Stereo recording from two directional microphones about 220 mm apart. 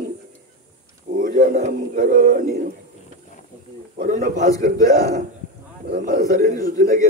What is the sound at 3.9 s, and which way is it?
Speech, 40° right (ahead or behind).